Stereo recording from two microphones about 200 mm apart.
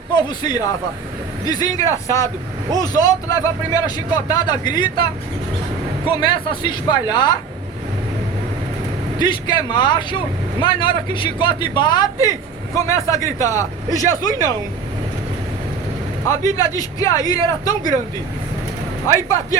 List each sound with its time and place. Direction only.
0.1 s a man's voice: 20° left (ahead or behind)
6.2 s speech: 25° left (ahead or behind)
9.1 s speech: 20° left (ahead or behind)
16.2 s speech: 15° left (ahead or behind)